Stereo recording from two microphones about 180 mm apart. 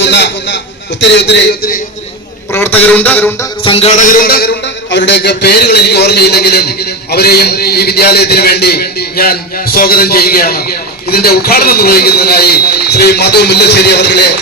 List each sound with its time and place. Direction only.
0.0 s a man's voice: 75° left (ahead or behind)
2.5 s a man's voice: 10° left (ahead or behind)
3.6 s a man's voice: 30° left (ahead or behind); by 14.3 s 65° left (ahead or behind)